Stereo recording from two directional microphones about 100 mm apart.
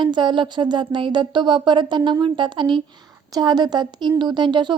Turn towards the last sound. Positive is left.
turn(degrees=-50)  # may be behind; listen again after turning